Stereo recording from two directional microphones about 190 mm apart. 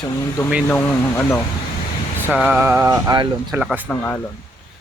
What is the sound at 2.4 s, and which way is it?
Mantra, 10° right (ahead or behind).